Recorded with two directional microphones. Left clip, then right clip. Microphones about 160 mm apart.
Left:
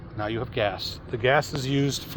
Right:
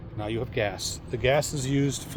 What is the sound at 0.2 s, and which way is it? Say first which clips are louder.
Speech: left 2 dB; 5° right (ahead or behind).